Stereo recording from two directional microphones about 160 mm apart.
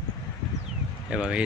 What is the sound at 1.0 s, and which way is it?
Speech, 5° right (ahead or behind).